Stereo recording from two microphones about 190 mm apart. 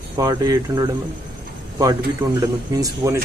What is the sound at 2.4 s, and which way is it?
Speech, 20° right (ahead or behind).